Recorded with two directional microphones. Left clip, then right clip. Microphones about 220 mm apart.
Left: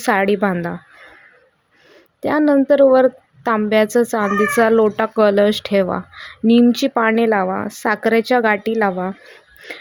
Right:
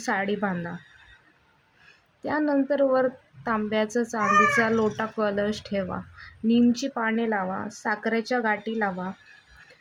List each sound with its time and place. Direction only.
0.0 s a woman's voice: 45° left (ahead or behind)
2.2 s a woman's voice: 45° left (ahead or behind)